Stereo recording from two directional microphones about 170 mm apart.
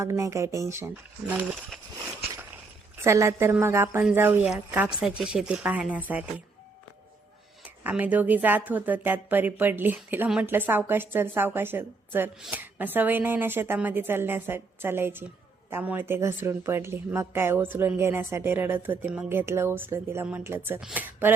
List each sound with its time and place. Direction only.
0.0 s speech: 20° right (ahead or behind)
2.3 s a sound: 10° right (ahead or behind)
3.0 s speech: 15° right (ahead or behind)
7.9 s speech: 10° right (ahead or behind)